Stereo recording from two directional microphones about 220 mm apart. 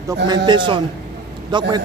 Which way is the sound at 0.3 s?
20° right (ahead or behind).